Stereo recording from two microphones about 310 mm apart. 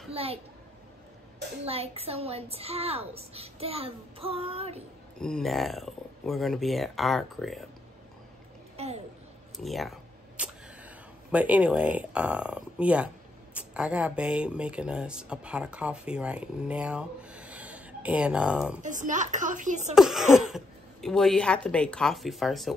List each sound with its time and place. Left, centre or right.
0.1 s a child's voice: centre
1.6 s a woman's voice: centre
5.2 s speech: centre
9.6 s a sound: centre
11.3 s speech: centre
18.8 s a woman's voice: right
20.0 s speech: centre